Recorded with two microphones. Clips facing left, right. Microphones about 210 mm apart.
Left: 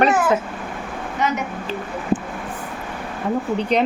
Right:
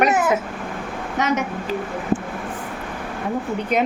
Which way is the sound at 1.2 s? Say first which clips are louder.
Right 1 dB; 80° right.